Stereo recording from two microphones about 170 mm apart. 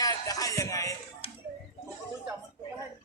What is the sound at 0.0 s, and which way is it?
Music, 20° left (ahead or behind).